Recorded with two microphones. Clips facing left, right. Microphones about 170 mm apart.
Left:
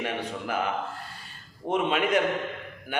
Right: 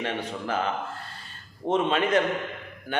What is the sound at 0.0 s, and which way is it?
Speech, 10° left (ahead or behind).